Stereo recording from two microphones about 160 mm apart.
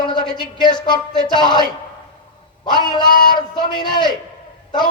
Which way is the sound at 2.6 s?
30° left (ahead or behind).